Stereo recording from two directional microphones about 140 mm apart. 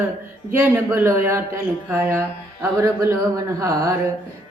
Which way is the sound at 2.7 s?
20° right (ahead or behind).